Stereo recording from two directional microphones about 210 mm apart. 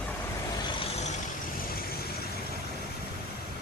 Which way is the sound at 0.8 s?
30° left (ahead or behind).